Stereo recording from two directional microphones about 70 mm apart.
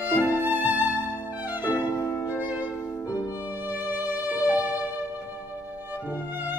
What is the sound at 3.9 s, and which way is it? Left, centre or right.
Music, right.